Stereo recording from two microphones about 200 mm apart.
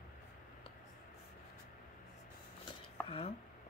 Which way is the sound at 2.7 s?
25° left (ahead or behind).